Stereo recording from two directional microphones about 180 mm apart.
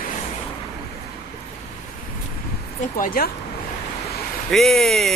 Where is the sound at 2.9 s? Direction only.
50° left (ahead or behind).